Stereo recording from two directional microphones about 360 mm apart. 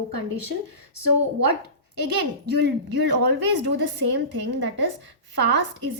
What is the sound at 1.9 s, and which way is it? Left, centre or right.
A woman's voice, right.